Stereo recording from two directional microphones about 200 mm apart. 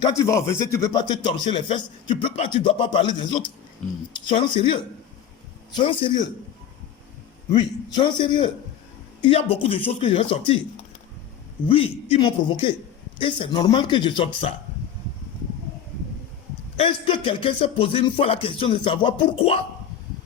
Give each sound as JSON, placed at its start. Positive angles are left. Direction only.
{"t": 0.2, "sound": "speech", "side_deg": 15}
{"t": 7.5, "sound": "speech", "side_deg": 25}
{"t": 11.7, "sound": "speech", "side_deg": 30}
{"t": 16.7, "sound": "speech", "side_deg": 30}